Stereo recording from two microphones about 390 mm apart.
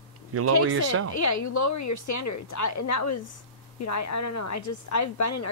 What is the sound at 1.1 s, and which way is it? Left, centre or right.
A woman's voice, left.